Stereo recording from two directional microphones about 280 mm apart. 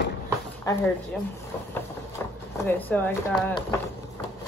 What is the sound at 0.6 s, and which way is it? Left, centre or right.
Speech, centre.